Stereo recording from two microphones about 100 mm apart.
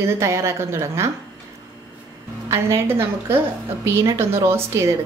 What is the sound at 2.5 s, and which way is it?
A woman's voice, 25° right (ahead or behind).